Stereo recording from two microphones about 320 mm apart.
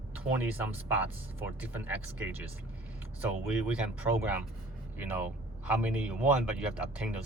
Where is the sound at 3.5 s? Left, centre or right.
Centre.